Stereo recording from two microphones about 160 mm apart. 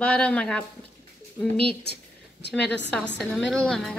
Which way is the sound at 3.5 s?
5° left (ahead or behind).